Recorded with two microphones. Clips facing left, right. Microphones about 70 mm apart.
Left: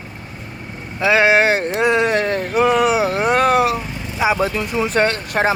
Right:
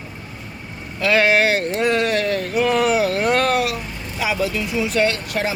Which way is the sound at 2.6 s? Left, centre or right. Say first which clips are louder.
Left 2 dB; centre.